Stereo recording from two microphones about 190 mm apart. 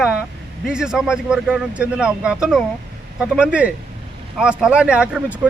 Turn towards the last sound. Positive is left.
turn(degrees=-5)  # may be behind; listen again after turning